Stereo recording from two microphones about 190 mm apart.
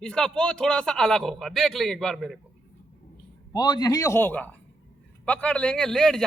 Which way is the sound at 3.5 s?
20° left (ahead or behind).